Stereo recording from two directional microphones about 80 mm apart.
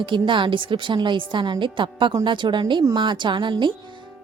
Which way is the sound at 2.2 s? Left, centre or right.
Right.